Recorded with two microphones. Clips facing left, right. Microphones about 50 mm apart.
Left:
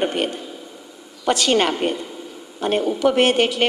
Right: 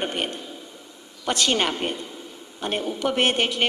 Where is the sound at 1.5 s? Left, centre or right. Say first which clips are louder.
Left 7 dB; left.